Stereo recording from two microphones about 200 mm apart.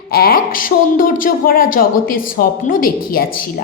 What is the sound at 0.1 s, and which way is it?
Speech, 45° left (ahead or behind).